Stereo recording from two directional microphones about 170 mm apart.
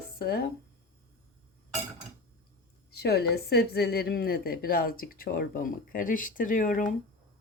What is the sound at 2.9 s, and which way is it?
A woman's voice, 70° left (ahead or behind).